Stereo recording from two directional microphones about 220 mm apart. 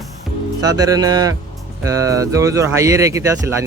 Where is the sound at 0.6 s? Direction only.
15° right (ahead or behind).